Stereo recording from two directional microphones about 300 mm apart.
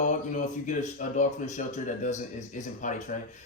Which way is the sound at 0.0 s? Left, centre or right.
Left.